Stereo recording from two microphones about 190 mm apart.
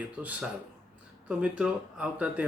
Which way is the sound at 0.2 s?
10° right (ahead or behind).